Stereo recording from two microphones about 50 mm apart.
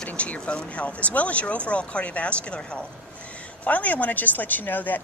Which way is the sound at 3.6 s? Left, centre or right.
Left.